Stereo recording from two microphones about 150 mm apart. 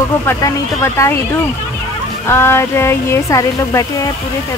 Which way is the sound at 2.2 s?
15° left (ahead or behind).